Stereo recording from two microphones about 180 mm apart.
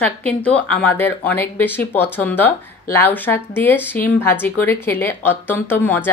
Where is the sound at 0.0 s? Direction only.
5° left (ahead or behind).